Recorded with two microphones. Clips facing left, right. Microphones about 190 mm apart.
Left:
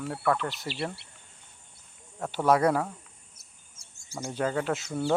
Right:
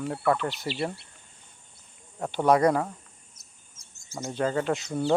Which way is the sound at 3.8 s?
10° left (ahead or behind).